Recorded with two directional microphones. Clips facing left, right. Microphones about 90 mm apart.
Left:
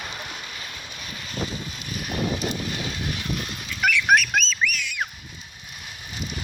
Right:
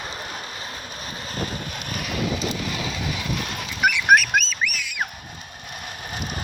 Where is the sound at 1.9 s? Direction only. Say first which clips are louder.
Even; 90° right.